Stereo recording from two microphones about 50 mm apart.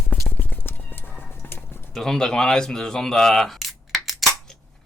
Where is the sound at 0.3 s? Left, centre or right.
Left.